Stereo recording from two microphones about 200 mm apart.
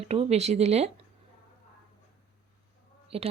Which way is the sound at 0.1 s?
30° right (ahead or behind).